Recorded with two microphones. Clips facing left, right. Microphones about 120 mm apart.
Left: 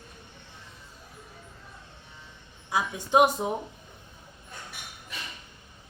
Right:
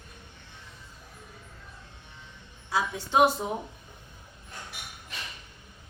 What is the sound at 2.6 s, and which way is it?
Speech, 15° left (ahead or behind).